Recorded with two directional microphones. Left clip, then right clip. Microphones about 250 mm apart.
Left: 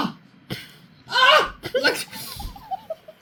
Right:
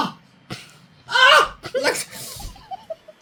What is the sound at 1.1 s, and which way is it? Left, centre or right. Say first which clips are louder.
Gasp: right 3 dB; right.